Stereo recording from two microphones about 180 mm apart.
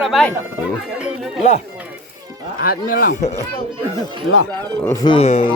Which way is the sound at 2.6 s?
55° left (ahead or behind).